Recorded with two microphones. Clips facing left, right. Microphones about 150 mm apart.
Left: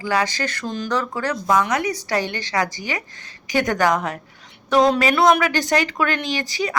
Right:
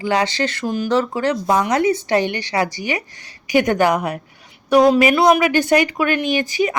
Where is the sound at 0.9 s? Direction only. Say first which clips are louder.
Right 5 dB; 25° right (ahead or behind).